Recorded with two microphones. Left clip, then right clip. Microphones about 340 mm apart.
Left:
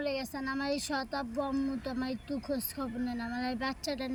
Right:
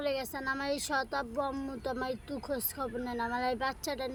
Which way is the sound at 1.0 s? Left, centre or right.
Right.